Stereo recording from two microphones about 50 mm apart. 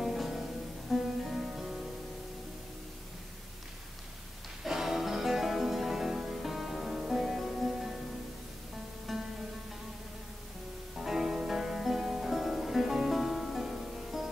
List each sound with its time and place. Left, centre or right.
0.0 s music: centre
4.6 s music: centre
9.1 s music: centre
11.0 s music: centre